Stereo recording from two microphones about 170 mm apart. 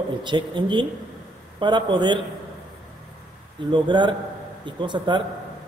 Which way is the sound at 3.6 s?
25° right (ahead or behind).